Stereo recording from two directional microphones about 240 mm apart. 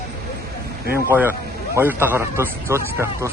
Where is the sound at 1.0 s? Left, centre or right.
Centre.